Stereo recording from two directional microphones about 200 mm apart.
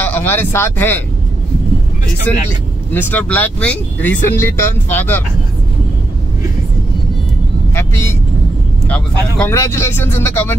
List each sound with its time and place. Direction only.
0.0 s speech: 10° left (ahead or behind)
2.3 s speech: 10° left (ahead or behind)
7.7 s vehicle: 10° left (ahead or behind)
8.8 s speech: 5° left (ahead or behind)